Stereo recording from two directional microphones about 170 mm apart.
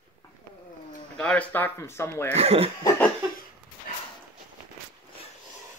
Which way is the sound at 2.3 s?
35° right (ahead or behind).